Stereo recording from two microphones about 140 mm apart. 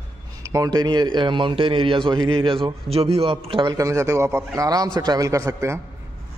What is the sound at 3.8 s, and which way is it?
A man's voice, 25° right (ahead or behind).